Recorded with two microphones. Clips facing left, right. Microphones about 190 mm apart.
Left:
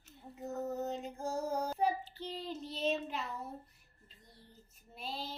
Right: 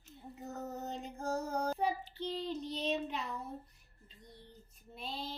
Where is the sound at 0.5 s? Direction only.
Centre (ahead or behind).